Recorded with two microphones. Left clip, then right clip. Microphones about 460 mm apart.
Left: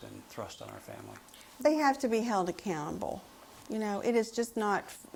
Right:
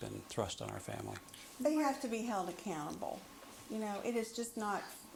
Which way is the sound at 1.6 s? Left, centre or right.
Left.